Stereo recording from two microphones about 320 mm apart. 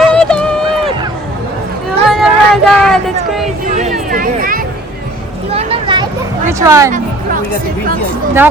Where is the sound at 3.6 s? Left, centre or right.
Right.